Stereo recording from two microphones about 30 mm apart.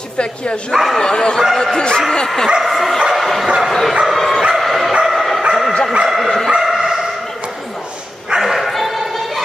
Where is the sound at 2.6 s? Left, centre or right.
Centre.